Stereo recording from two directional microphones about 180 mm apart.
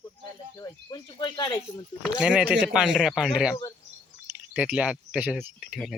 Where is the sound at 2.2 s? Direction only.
5° right (ahead or behind).